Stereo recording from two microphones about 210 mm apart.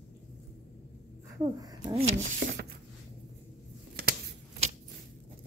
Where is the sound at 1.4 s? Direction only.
20° right (ahead or behind).